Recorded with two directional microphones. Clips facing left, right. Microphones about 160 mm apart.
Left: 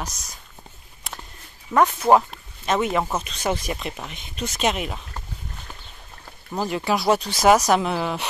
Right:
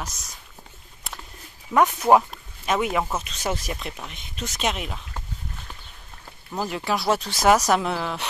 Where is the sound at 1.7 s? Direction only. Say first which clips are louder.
Left 1 dB; 10° right (ahead or behind).